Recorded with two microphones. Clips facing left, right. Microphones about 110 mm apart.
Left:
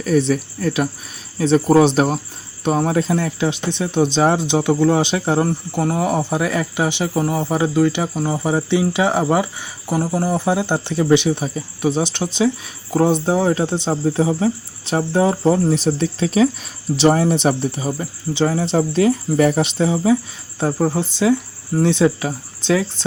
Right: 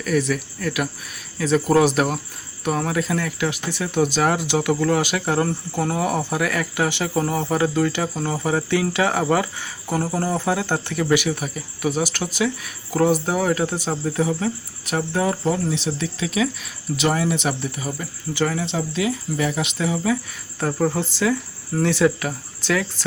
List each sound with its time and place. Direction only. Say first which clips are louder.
0.0 s speech: left 5 dB; 30° left (ahead or behind)
5.5 s speech: left 3 dB; 10° left (ahead or behind); by 18.6 s 30° left (ahead or behind)
18.6 s speech: left 7 dB; 40° left (ahead or behind)
19.6 s speech: left 5 dB; 30° left (ahead or behind)